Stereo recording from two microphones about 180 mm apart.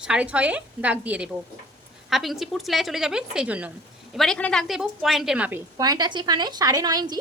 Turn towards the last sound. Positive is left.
turn(degrees=-20)  # may be behind; listen again after turning